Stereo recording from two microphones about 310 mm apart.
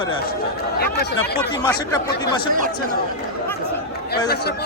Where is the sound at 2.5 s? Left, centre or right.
Right.